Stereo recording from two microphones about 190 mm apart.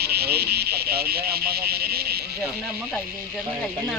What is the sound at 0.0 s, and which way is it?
Frog, 55° right (ahead or behind).